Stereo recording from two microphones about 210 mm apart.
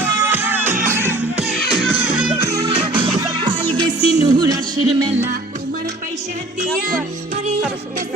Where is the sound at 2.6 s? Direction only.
25° right (ahead or behind).